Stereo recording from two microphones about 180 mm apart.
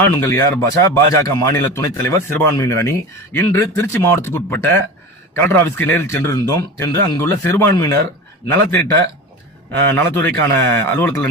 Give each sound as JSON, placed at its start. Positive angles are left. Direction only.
{"t": 0.0, "sound": "a man's voice", "side_deg": 15}
{"t": 9.7, "sound": "a man's voice", "side_deg": 10}